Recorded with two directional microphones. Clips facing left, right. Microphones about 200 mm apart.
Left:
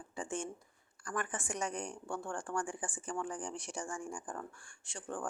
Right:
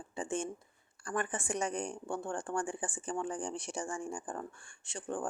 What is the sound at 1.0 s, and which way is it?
Speech, 25° right (ahead or behind).